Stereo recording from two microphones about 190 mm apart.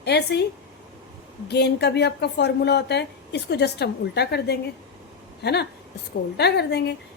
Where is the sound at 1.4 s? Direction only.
60° left (ahead or behind).